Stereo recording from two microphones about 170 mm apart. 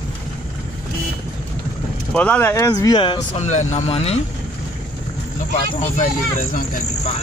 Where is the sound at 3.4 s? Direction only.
45° left (ahead or behind).